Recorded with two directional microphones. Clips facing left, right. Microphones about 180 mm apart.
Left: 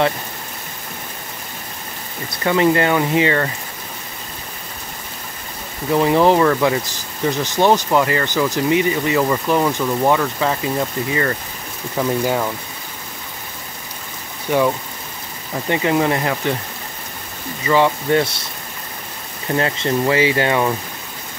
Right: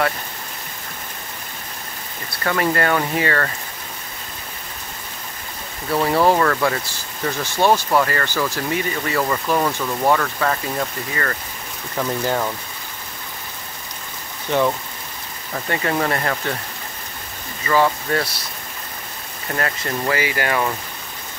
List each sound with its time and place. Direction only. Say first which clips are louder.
2.4 s speech: left 4 dB; 20° left (ahead or behind)
5.9 s speech: left 3 dB; 15° left (ahead or behind)
14.5 s speech: left 2 dB; 5° left (ahead or behind)
17.6 s speech: left 3 dB; 15° left (ahead or behind)
19.5 s speech: left 6 dB; 25° left (ahead or behind)